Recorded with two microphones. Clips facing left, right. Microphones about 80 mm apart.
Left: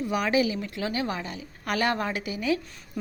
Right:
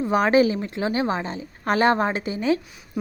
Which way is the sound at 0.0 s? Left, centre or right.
Right.